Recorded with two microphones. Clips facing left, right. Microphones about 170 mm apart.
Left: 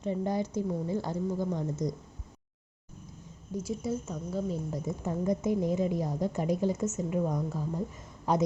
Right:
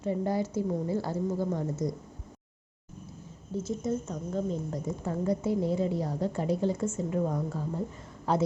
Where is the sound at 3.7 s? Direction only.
5° left (ahead or behind).